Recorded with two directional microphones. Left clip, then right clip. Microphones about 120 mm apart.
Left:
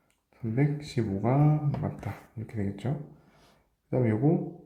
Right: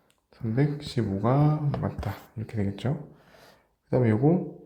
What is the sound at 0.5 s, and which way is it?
Speech, 25° right (ahead or behind).